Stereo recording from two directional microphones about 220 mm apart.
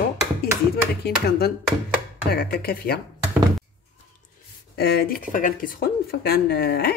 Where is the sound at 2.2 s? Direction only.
45° left (ahead or behind).